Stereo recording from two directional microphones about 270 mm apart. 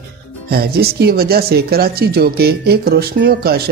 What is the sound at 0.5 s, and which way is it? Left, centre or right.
Speech, right.